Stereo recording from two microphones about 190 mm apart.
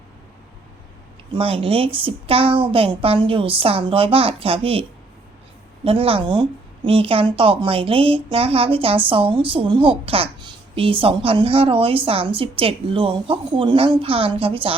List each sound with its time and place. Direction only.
1.4 s a woman's voice: 30° right (ahead or behind)